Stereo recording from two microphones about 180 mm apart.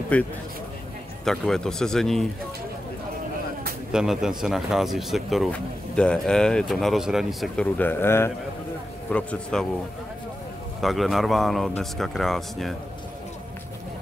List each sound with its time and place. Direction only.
0.1 s speech: 10° left (ahead or behind)
3.9 s speech: 5° right (ahead or behind)
10.8 s speech: centre (ahead or behind)